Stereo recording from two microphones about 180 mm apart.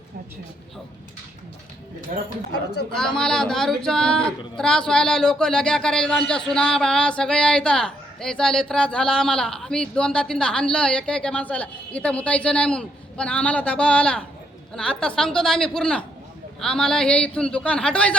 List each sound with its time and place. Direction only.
2.1 s speech: 45° right (ahead or behind)
2.9 s a man's voice: 5° left (ahead or behind)